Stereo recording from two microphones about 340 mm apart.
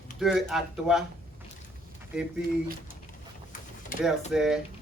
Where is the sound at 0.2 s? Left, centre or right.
Centre.